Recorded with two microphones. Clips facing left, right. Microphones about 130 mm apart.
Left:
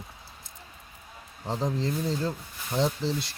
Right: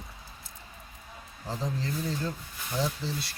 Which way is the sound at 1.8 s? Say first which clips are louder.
Left 4 dB; 30° left (ahead or behind).